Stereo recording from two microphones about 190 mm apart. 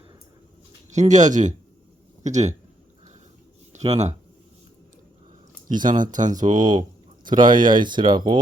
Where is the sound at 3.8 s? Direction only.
35° right (ahead or behind).